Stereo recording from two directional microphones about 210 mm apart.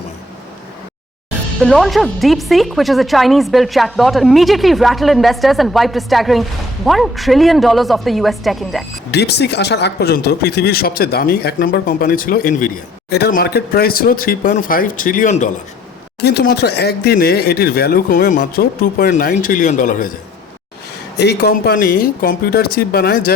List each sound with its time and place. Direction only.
1.6 s speech: centre (ahead or behind)
9.1 s speech: 50° left (ahead or behind)
16.2 s speech: 45° left (ahead or behind)
21.2 s speech: 50° left (ahead or behind)